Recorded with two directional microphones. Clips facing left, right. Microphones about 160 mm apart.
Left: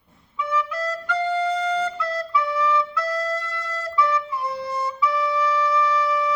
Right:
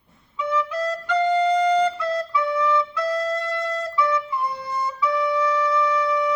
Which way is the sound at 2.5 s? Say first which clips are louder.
Right 2 dB; 30° right (ahead or behind).